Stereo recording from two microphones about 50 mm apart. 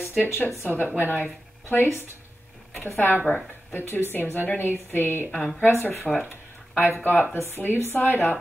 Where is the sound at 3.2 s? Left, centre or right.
Left.